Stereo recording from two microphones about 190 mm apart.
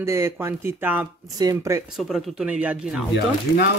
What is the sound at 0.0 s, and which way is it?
Speech, 15° right (ahead or behind).